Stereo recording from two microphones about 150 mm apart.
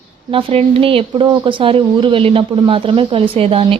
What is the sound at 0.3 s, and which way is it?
A woman's voice, 40° right (ahead or behind).